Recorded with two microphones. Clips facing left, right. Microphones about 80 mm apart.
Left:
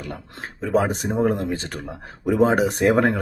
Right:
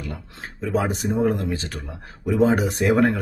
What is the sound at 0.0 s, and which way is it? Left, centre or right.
Speech, left.